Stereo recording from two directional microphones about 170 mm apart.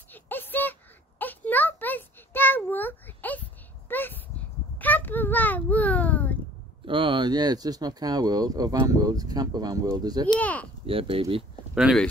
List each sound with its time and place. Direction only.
0.1 s a sound: 10° left (ahead or behind)
6.9 s speech: 30° right (ahead or behind)
10.4 s speech: 10° left (ahead or behind)
10.9 s speech: 35° right (ahead or behind)
11.7 s speech: centre (ahead or behind)